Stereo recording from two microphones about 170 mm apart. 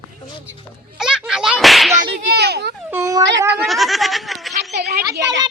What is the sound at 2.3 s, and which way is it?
Speech, 70° right (ahead or behind).